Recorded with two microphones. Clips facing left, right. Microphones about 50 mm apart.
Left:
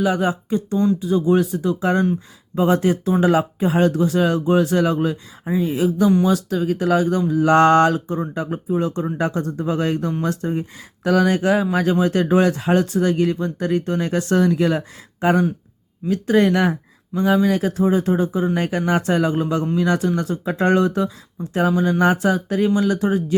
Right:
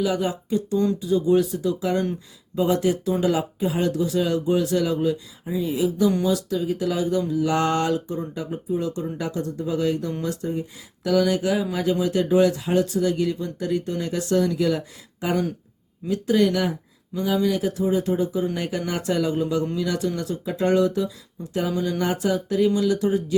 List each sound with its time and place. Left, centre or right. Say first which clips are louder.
0.0 s speech: left 4 dB; left